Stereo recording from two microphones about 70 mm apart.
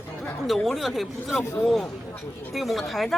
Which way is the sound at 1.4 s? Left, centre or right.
Left.